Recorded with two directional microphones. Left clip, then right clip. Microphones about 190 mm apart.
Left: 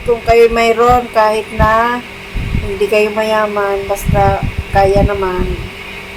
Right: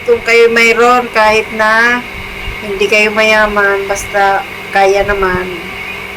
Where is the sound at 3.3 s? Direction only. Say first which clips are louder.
Right 4 dB; 15° right (ahead or behind).